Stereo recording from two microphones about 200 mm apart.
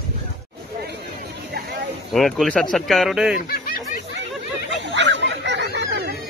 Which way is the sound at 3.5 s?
45° left (ahead or behind).